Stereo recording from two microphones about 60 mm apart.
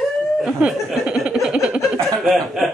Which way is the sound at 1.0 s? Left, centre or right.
Centre.